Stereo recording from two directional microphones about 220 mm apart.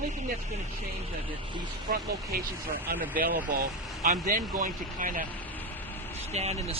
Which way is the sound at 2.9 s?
45° right (ahead or behind).